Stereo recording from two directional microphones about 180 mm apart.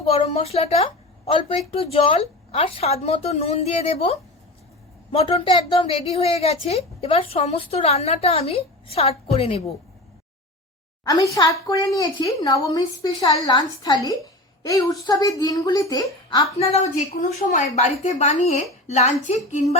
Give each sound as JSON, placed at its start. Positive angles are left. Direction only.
{"t": 0.0, "sound": "a woman's voice", "side_deg": 35}
{"t": 11.0, "sound": "a woman's voice", "side_deg": 20}
{"t": 16.6, "sound": "a woman's voice", "side_deg": 35}